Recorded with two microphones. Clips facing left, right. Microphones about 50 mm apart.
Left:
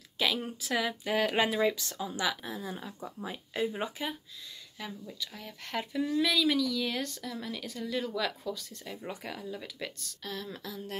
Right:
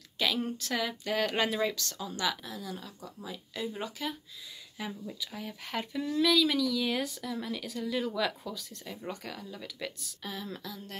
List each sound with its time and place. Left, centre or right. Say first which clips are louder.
0.2 s speech: even; centre
2.4 s speech: left 2 dB; left
4.7 s speech: right 2 dB; centre